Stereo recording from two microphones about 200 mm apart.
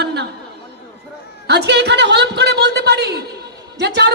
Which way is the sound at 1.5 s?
55° right (ahead or behind).